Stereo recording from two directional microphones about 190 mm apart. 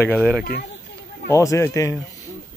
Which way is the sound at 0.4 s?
55° left (ahead or behind).